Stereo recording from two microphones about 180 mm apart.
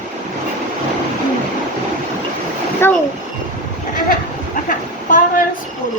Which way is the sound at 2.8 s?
10° left (ahead or behind).